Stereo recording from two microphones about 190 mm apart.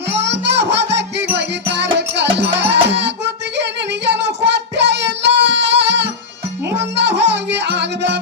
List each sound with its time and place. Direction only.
0.1 s music: 65° right (ahead or behind)
3.6 s child singing: 65° right (ahead or behind)
6.7 s music: 65° right (ahead or behind)